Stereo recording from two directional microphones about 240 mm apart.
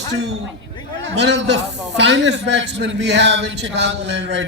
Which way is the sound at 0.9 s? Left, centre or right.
Right.